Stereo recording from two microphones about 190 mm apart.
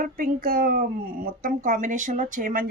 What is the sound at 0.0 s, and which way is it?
Speech, 45° right (ahead or behind).